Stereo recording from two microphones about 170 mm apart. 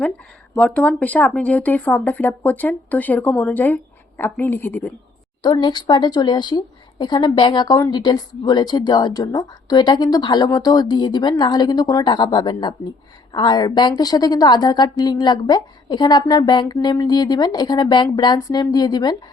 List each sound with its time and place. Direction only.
0.5 s speech: 5° left (ahead or behind)
5.4 s a woman's voice: 25° left (ahead or behind)